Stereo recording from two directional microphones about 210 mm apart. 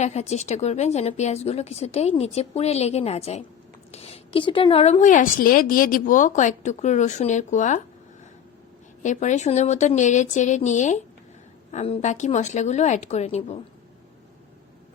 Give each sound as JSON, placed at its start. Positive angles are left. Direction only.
{"t": 0.0, "sound": "a woman's voice", "side_deg": 30}
{"t": 9.0, "sound": "a woman's voice", "side_deg": 35}